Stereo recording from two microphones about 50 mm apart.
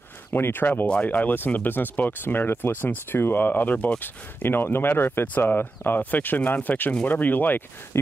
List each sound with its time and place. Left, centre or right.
0.3 s speech: left
7.9 s speech: left